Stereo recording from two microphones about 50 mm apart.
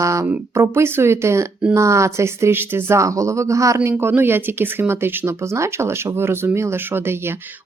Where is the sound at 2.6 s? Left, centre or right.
Right.